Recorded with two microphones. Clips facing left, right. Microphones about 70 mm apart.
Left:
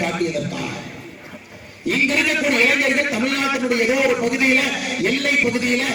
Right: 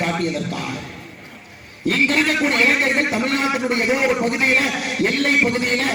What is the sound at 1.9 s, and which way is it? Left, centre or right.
A man's voice, right.